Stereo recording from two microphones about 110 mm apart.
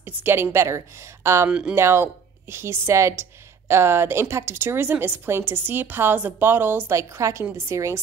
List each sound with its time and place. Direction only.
0.0 s a woman's voice: 20° right (ahead or behind)
1.5 s speech: 10° right (ahead or behind)
1.8 s a woman's voice: 20° right (ahead or behind)